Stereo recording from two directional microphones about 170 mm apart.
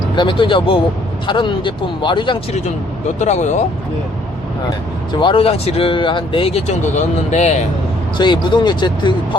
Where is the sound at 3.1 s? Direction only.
45° left (ahead or behind).